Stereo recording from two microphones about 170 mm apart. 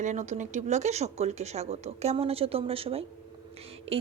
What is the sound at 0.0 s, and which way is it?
Speech, 45° right (ahead or behind).